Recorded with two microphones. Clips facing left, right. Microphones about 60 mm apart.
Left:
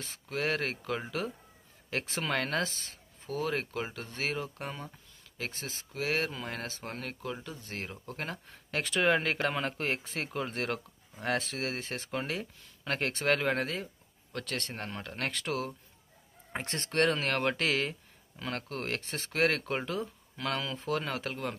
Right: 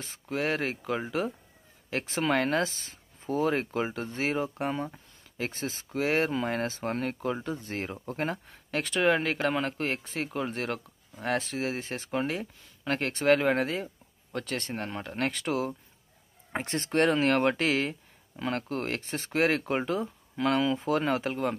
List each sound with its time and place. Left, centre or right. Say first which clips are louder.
0.0 s speech: right 3 dB; centre
8.5 s speech: right 2 dB; centre